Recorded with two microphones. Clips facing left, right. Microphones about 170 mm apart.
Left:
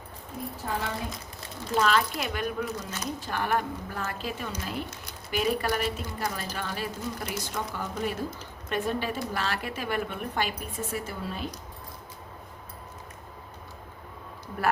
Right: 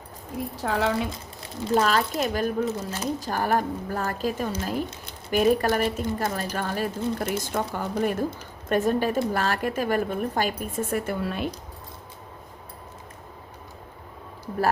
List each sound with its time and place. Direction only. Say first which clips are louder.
0.5 s a woman's voice: right 8 dB; 90° right
1.7 s a woman's voice: right 3 dB; 40° right (ahead or behind)
2.6 s a woman's voice: right 6 dB; 25° right (ahead or behind); by 11.4 s 65° right (ahead or behind)